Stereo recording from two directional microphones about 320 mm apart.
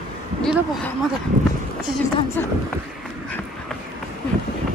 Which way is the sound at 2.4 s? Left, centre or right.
Centre.